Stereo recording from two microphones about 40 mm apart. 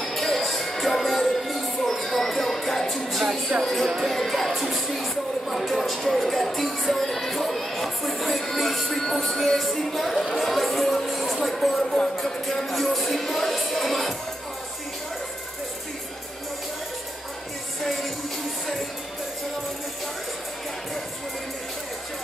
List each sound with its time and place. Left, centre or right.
0.0 s music: centre
3.1 s speech: centre
3.6 s music: centre
17.8 s music: centre